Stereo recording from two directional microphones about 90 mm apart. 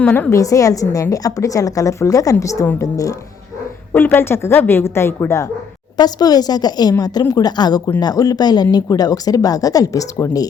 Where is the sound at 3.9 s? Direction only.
20° left (ahead or behind).